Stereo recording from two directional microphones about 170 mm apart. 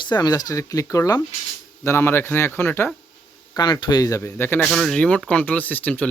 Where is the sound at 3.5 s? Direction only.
25° left (ahead or behind); by 6.1 s 10° left (ahead or behind).